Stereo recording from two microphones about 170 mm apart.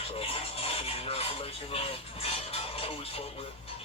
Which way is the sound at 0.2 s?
35° left (ahead or behind).